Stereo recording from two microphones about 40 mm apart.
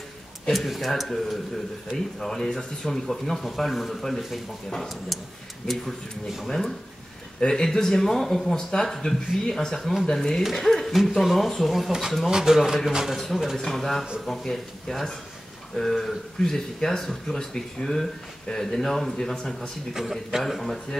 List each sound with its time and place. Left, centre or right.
0.5 s speech: centre
5.7 s speech: centre
6.4 s speech: centre
13.6 s speech: centre
19.9 s speech: centre
20.4 s speech: centre